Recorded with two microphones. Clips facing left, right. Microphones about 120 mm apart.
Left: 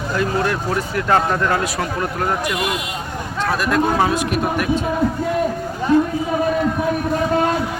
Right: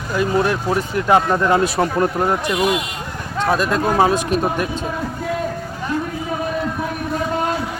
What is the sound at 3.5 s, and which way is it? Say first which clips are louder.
Speech: even; 25° right (ahead or behind).